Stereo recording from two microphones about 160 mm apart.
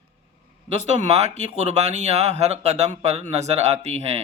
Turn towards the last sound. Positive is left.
turn(degrees=-40)  # may be behind; listen again after turning